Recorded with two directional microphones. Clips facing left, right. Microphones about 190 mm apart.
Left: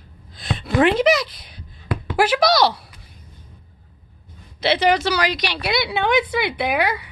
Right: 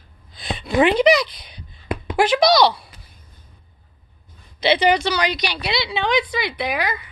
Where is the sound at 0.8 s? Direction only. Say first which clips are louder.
Right 1 dB; centre (ahead or behind).